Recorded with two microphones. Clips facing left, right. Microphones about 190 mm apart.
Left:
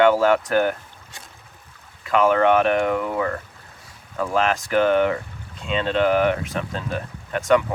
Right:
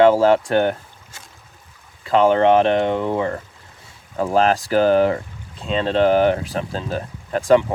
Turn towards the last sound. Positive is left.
turn(degrees=-30)  # may be behind; listen again after turning